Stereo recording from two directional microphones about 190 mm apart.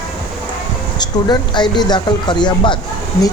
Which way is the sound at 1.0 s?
25° left (ahead or behind).